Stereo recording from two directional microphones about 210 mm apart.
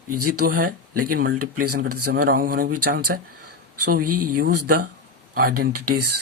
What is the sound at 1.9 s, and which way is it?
Speech, 90° right.